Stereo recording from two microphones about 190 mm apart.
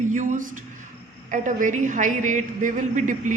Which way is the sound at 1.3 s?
40° right (ahead or behind).